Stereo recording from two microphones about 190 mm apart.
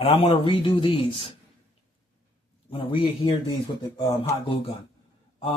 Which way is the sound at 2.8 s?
25° left (ahead or behind).